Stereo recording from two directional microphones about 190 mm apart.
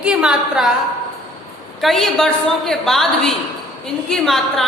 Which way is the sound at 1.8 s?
Centre (ahead or behind).